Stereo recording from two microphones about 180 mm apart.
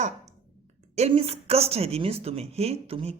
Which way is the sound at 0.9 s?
35° right (ahead or behind).